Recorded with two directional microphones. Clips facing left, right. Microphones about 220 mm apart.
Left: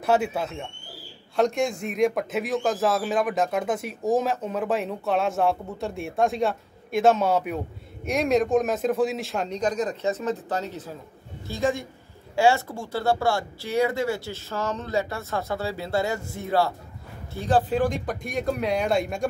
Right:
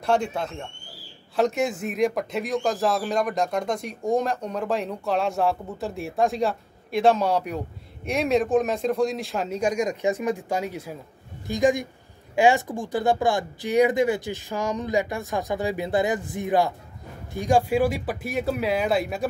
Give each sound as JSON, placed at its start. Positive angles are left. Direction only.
{"t": 0.0, "sound": "a man's voice", "side_deg": 5}